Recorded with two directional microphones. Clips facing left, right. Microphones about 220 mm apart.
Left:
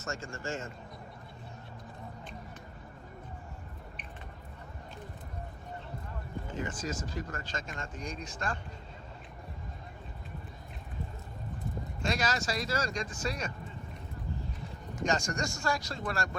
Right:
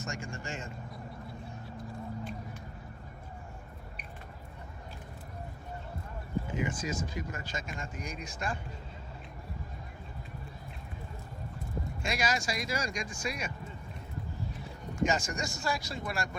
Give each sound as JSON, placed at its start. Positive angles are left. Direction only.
{"t": 0.0, "sound": "speech", "side_deg": -15}
{"t": 6.5, "sound": "speech", "side_deg": -10}
{"t": 12.0, "sound": "speech", "side_deg": -10}
{"t": 15.0, "sound": "speech", "side_deg": -5}